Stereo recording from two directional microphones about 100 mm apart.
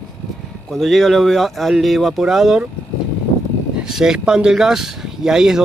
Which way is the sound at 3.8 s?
5° right (ahead or behind).